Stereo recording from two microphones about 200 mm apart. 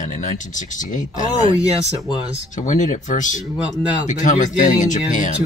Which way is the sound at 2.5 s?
35° left (ahead or behind).